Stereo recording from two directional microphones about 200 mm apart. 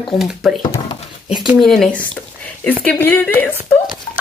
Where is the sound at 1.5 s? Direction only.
Centre (ahead or behind).